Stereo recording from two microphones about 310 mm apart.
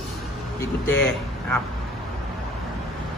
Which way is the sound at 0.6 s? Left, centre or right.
Centre.